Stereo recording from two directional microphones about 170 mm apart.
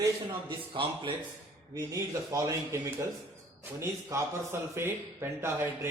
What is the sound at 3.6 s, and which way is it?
Speech, 15° right (ahead or behind).